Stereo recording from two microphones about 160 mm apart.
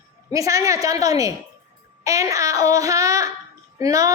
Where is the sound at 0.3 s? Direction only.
20° right (ahead or behind).